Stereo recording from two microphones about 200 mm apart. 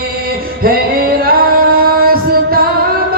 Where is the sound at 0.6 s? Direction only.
50° right (ahead or behind).